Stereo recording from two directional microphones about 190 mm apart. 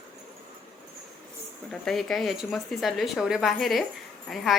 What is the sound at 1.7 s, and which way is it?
A woman's voice, centre (ahead or behind).